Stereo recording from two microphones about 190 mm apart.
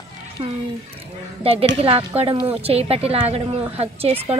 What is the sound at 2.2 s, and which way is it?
A woman's voice, 30° right (ahead or behind).